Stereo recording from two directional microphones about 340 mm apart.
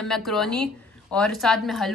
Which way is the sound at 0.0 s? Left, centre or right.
Centre.